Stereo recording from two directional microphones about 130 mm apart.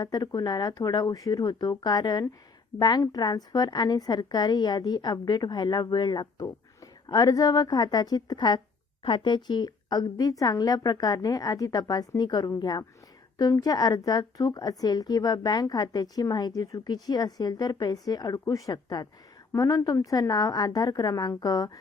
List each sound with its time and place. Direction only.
0.0 s a woman's voice: 30° left (ahead or behind)